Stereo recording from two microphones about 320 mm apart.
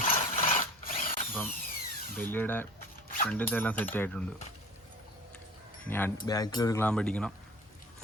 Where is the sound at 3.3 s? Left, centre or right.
Centre.